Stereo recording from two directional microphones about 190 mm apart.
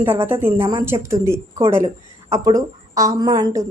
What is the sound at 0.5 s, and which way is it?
Speech, 30° right (ahead or behind).